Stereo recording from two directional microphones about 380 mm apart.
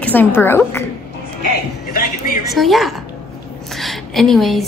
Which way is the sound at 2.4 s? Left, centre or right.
Centre.